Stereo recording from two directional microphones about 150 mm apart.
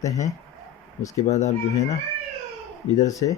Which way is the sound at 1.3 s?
50° left (ahead or behind).